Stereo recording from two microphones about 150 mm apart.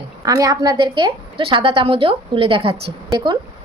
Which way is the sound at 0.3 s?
25° right (ahead or behind).